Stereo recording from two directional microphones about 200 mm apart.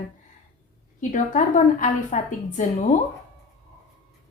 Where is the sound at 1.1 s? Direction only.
40° left (ahead or behind).